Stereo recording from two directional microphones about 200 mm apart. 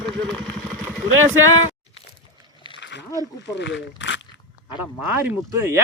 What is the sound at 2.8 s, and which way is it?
Wild animals, 60° left (ahead or behind).